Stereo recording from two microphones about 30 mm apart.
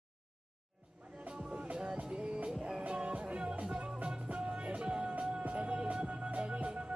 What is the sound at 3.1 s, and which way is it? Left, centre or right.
Music, right.